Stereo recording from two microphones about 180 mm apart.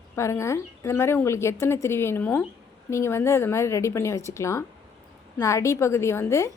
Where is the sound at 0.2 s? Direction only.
15° left (ahead or behind).